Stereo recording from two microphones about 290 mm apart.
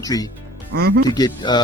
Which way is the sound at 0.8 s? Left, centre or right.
Right.